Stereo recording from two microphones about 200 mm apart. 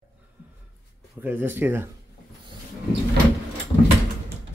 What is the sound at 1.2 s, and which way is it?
Speech, 10° right (ahead or behind).